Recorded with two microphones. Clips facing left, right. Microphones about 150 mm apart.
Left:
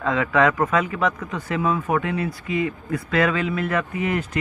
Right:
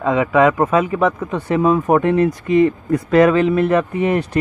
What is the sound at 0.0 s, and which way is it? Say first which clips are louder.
A man's voice: right 5 dB; 20° right (ahead or behind).